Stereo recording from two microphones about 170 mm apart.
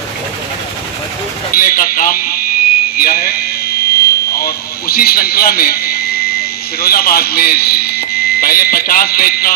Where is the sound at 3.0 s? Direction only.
60° left (ahead or behind).